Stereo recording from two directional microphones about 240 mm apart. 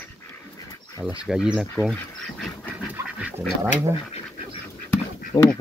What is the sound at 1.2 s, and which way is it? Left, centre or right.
Speech, centre.